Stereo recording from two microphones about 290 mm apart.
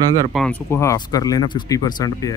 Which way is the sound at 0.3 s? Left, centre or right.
Centre.